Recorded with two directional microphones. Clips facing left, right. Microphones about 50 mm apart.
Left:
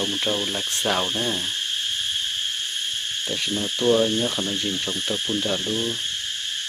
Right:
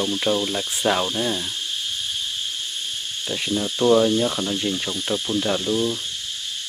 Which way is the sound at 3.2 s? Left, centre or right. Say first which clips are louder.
Right 3 dB; right.